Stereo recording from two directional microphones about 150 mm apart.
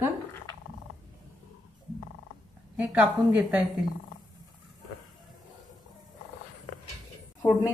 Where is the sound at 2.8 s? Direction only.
10° right (ahead or behind).